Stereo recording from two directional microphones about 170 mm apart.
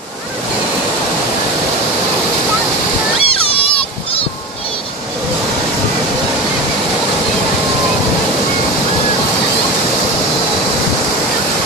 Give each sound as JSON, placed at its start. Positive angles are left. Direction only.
{"t": 3.2, "sound": "splash", "side_deg": 35}